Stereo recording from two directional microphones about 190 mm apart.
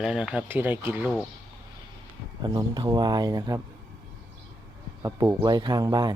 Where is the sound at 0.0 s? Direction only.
5° right (ahead or behind).